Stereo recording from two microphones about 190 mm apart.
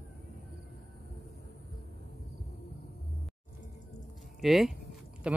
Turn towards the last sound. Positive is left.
turn(degrees=-5)  # may be behind; listen again after turning